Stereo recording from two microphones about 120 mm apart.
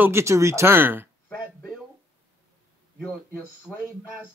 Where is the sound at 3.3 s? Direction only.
15° left (ahead or behind).